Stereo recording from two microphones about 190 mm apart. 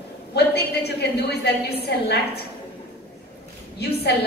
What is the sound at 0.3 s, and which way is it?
A woman's voice, 60° left (ahead or behind).